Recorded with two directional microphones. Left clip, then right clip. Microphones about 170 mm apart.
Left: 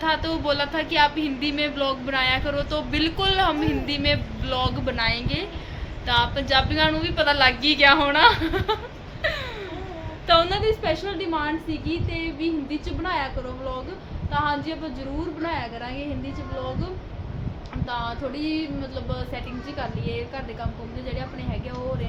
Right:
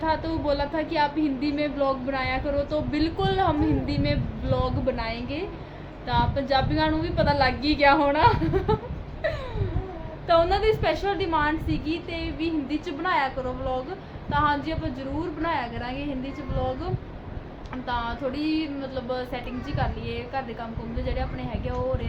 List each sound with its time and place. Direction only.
0.0 s speech: 20° right (ahead or behind)
10.2 s speech: 10° right (ahead or behind)
14.3 s speech: 10° right (ahead or behind)
17.8 s speech: 10° right (ahead or behind)